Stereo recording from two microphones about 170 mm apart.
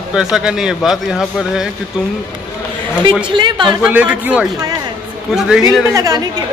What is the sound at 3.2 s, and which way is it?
Speech, 30° right (ahead or behind).